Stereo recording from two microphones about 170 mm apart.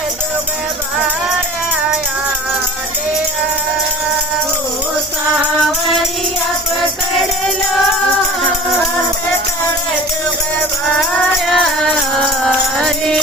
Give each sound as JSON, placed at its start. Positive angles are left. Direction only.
{"t": 11.4, "sound": "music", "side_deg": 5}